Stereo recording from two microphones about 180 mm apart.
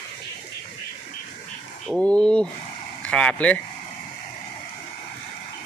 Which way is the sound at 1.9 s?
5° left (ahead or behind).